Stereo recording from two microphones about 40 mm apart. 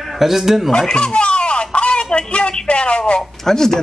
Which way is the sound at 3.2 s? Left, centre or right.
Centre.